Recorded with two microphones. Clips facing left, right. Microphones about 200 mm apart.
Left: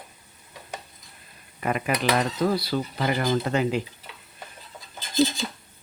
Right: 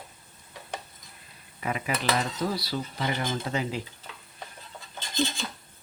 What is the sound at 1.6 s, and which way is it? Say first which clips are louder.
Cutlery: left 5 dB; 55° left (ahead or behind).